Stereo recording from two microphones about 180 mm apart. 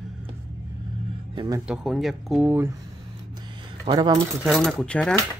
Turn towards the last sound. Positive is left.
turn(degrees=5)  # may be behind; listen again after turning